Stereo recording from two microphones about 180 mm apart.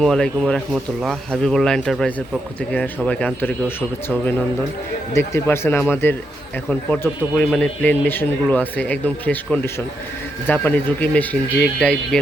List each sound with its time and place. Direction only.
0.0 s speech: 5° left (ahead or behind)